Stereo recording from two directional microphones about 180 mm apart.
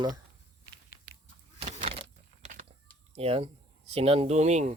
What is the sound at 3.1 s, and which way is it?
Speech, 35° right (ahead or behind).